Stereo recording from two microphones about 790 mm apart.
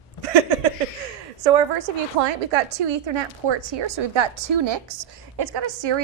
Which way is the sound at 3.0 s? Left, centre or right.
Right.